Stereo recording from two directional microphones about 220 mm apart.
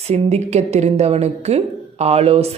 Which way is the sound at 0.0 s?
30° right (ahead or behind).